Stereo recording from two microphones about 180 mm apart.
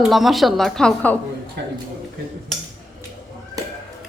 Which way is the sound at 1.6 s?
70° right (ahead or behind).